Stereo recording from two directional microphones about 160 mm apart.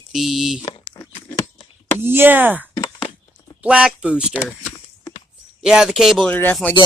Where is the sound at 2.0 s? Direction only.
15° right (ahead or behind).